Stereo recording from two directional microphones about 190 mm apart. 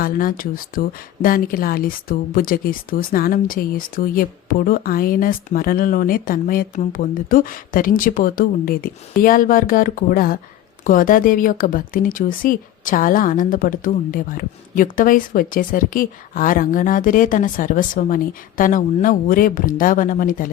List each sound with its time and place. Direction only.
0.0 s a woman's voice: 45° left (ahead or behind)